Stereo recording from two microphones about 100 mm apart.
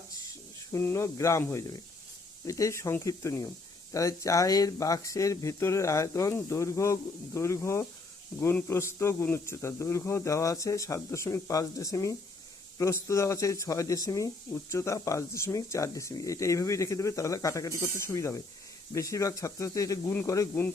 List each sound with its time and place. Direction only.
0.7 s speech: 25° left (ahead or behind)